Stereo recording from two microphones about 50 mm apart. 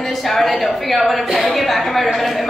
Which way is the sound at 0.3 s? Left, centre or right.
Centre.